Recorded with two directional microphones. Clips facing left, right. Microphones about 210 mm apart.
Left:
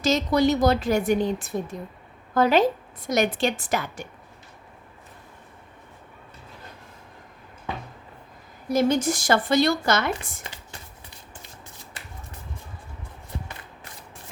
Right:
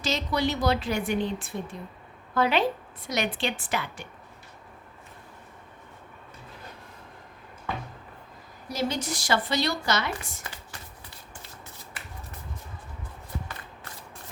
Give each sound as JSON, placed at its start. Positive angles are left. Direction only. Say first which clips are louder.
{"t": 0.0, "sound": "speech", "louder": "left 7 dB", "side_deg": 45}
{"t": 8.7, "sound": "speech", "louder": "left 8 dB", "side_deg": 50}